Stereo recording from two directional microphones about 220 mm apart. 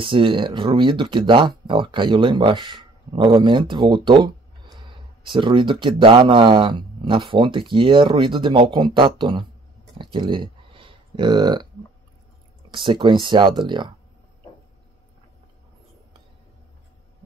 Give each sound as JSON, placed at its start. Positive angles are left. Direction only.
{"t": 0.0, "sound": "speech", "side_deg": -25}
{"t": 10.1, "sound": "a sound", "side_deg": -20}
{"t": 12.7, "sound": "speech", "side_deg": -20}